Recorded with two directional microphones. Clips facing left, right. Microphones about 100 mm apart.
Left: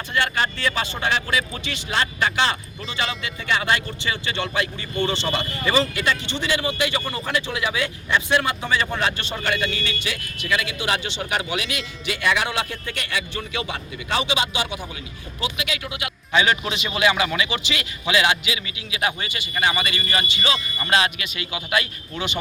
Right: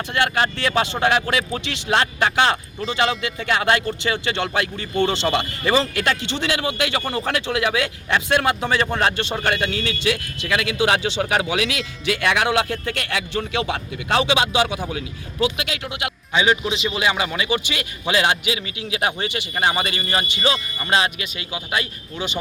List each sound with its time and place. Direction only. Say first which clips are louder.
0.1 s speech: right 2 dB; 60° right (ahead or behind); by 14.8 s 90° right
16.3 s a man's voice: right 1 dB; 20° right (ahead or behind); by 20.0 s 40° right (ahead or behind)
20.0 s a man's voice: right 2 dB; 30° right (ahead or behind)